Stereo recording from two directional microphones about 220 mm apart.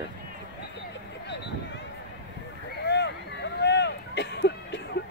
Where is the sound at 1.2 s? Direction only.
50° left (ahead or behind).